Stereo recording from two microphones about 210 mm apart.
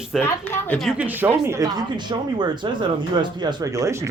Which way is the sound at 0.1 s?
Centre (ahead or behind).